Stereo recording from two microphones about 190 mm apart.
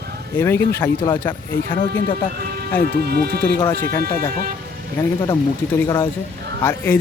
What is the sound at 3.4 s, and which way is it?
Speech, 10° left (ahead or behind).